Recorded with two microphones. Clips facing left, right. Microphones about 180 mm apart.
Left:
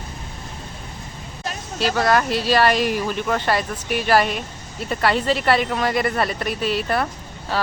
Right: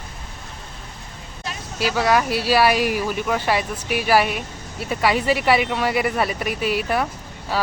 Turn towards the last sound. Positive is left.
turn(degrees=-10)  # may be behind; listen again after turning